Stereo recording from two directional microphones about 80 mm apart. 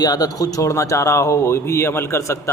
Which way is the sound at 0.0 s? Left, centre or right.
Left.